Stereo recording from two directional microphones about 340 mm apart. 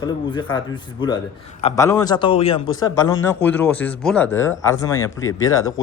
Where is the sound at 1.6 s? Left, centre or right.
Centre.